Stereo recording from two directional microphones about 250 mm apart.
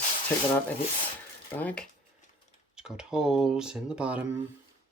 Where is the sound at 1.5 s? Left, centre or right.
Centre.